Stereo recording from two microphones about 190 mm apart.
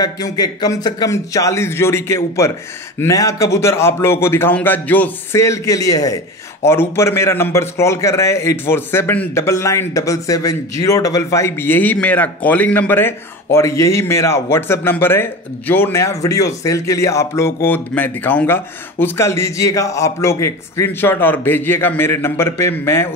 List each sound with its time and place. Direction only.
0.0 s a man's voice: 20° left (ahead or behind)